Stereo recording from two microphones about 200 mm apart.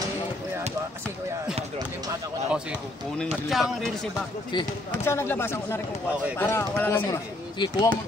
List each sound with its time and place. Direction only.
3.2 s speech: centre (ahead or behind)
4.5 s speech: 20° left (ahead or behind)
7.5 s speech: 20° left (ahead or behind)